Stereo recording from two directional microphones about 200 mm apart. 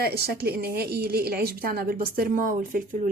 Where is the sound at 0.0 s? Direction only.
55° right (ahead or behind).